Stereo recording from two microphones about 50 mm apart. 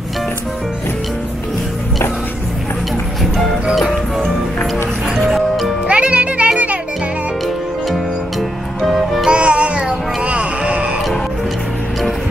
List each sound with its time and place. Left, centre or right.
5.1 s music: centre
5.9 s music: right
7.9 s music: centre
9.3 s music: right